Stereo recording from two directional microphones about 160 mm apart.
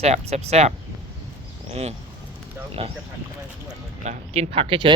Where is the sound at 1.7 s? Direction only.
40° right (ahead or behind).